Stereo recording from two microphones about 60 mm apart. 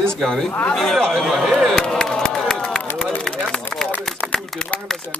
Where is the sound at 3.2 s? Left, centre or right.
Centre.